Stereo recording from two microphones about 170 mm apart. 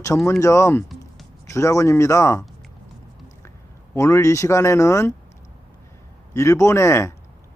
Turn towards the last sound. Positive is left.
turn(degrees=15)  # may be behind; listen again after turning